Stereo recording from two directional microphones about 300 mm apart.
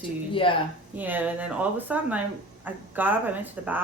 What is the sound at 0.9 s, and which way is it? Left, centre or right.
Speech, centre.